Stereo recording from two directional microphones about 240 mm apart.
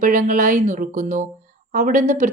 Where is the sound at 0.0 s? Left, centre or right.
Right.